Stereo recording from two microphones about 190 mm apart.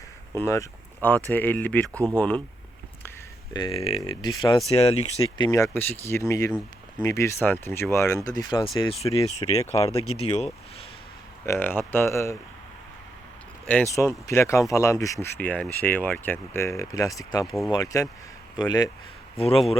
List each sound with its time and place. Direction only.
0.3 s speech: 15° left (ahead or behind)
3.5 s speech: 25° left (ahead or behind)
4.7 s speech: 35° left (ahead or behind)
5.5 s speech: 15° left (ahead or behind)
9.8 s speech: 35° left (ahead or behind)
11.4 s speech: 10° left (ahead or behind)
13.9 s speech: 15° left (ahead or behind)
17.4 s speech: centre (ahead or behind)
17.7 s speech: 20° left (ahead or behind)